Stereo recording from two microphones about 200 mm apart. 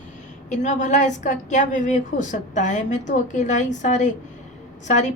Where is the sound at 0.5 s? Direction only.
40° left (ahead or behind).